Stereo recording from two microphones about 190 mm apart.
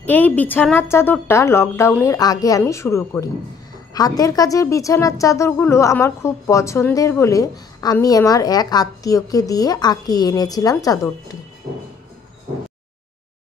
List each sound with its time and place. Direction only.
0.0 s a woman's voice: 10° left (ahead or behind)